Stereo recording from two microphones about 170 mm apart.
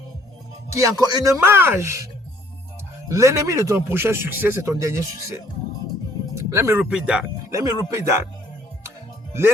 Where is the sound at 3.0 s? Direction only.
20° right (ahead or behind).